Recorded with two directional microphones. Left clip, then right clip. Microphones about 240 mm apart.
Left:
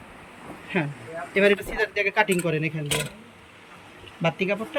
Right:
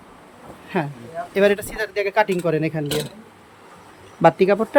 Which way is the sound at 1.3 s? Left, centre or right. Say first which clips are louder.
Right 2 dB; centre.